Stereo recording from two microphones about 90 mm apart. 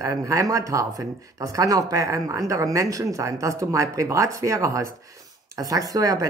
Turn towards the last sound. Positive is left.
turn(degrees=-40)  # may be behind; listen again after turning